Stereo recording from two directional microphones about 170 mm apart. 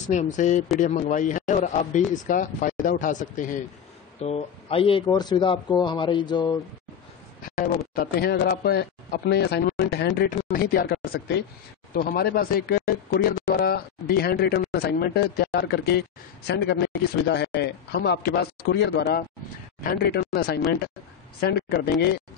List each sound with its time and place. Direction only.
0.0 s a man's voice: 45° left (ahead or behind)
4.2 s speech: 35° left (ahead or behind)
7.4 s a sound: 55° left (ahead or behind)
7.9 s speech: 65° left (ahead or behind)
11.9 s speech: 55° left (ahead or behind); by 19.2 s 75° left (ahead or behind)
19.8 s speech: 60° left (ahead or behind)